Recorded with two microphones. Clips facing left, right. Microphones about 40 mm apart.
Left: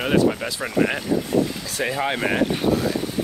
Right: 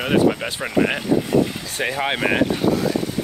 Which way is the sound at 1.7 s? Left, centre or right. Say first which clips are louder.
Even; right.